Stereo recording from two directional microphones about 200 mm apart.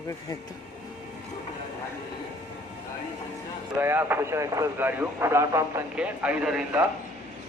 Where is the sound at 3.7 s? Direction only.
10° right (ahead or behind).